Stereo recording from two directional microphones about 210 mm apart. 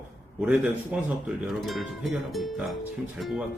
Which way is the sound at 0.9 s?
5° right (ahead or behind).